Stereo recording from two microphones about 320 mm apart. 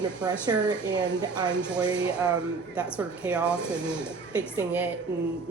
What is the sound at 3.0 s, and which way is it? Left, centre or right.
Speech, centre.